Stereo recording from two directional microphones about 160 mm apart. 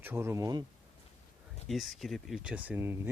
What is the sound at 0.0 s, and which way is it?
Speech, 15° right (ahead or behind).